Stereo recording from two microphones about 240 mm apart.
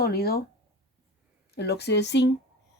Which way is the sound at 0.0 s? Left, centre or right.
Left.